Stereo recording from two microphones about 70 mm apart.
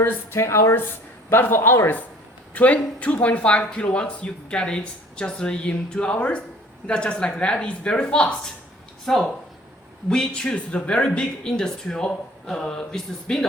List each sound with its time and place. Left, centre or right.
0.0 s speech: left
2.6 s speech: left